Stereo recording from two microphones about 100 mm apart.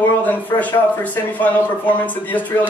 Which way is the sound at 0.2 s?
15° left (ahead or behind).